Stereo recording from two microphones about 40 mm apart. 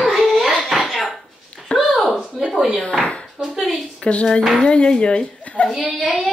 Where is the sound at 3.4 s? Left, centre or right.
Right.